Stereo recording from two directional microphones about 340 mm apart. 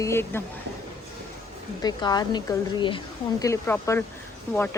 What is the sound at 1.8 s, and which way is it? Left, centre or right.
A woman's voice, centre.